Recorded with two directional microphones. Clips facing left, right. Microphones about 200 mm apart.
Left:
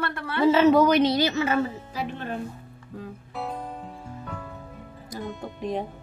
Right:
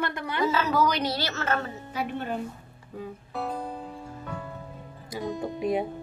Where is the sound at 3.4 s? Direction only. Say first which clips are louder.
Right 1 dB; centre (ahead or behind).